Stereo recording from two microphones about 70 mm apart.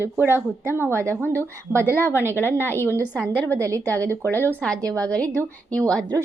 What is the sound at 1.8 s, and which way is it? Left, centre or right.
A woman's voice, left.